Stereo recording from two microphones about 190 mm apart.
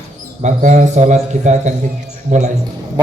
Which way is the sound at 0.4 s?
40° right (ahead or behind).